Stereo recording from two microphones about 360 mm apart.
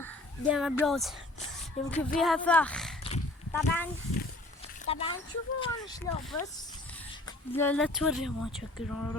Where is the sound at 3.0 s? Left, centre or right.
Centre.